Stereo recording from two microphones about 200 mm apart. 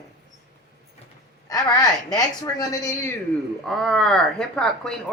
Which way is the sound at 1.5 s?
20° left (ahead or behind).